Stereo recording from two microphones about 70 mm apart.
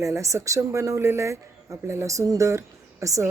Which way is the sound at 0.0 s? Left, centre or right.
Right.